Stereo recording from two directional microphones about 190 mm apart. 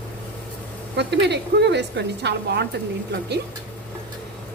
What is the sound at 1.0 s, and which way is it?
A woman's voice, 65° right (ahead or behind).